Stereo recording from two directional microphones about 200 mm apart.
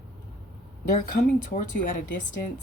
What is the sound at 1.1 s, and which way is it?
Speech, 45° left (ahead or behind).